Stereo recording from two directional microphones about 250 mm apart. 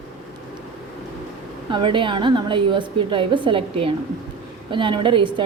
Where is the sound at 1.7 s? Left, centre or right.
Centre.